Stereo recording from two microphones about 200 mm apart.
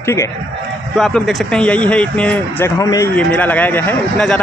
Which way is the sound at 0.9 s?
Centre (ahead or behind).